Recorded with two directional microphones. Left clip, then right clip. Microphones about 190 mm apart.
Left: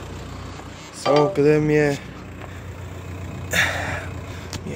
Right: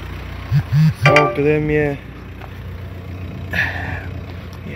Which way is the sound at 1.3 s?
10° left (ahead or behind).